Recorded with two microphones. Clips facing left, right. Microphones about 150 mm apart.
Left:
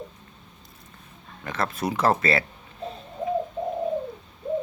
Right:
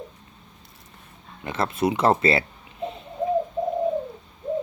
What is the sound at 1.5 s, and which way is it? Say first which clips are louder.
Speech: right 4 dB; 25° right (ahead or behind).